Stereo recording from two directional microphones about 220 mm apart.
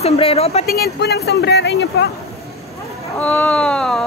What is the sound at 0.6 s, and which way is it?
Speech, 45° left (ahead or behind).